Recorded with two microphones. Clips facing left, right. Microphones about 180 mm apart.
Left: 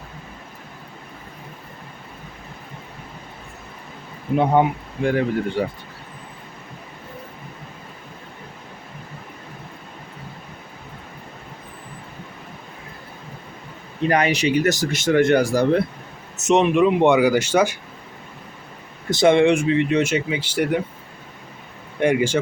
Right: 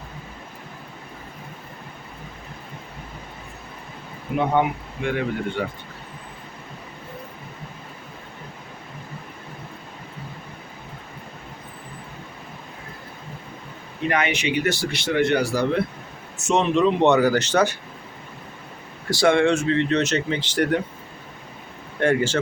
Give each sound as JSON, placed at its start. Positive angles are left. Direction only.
{"t": 4.3, "sound": "speech", "side_deg": -15}
{"t": 5.0, "sound": "speech", "side_deg": 35}
{"t": 14.1, "sound": "speech", "side_deg": 35}
{"t": 16.4, "sound": "speech", "side_deg": 20}
{"t": 19.1, "sound": "speech", "side_deg": 20}
{"t": 22.0, "sound": "speech", "side_deg": 10}